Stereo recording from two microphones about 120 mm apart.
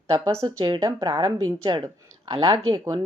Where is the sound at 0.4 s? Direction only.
40° right (ahead or behind).